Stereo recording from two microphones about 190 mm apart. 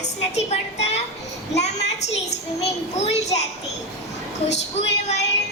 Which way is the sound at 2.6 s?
35° left (ahead or behind).